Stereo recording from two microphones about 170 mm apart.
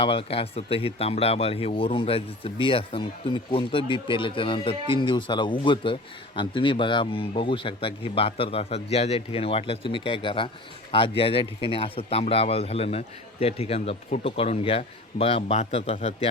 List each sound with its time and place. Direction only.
0.0 s speech: 35° left (ahead or behind)